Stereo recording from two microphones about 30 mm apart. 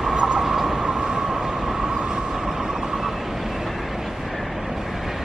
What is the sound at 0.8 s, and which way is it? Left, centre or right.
Train, right.